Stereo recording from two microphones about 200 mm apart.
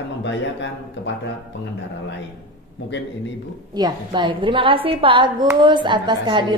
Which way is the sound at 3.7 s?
20° right (ahead or behind).